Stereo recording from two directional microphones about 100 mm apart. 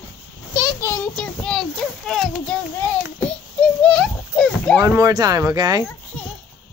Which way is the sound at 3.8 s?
10° left (ahead or behind).